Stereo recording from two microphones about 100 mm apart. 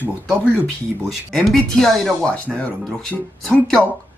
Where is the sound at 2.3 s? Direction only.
15° left (ahead or behind).